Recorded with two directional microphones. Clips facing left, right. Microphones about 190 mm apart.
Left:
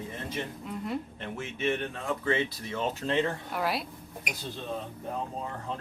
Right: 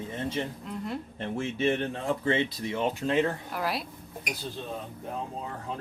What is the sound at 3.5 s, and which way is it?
Speech, centre (ahead or behind).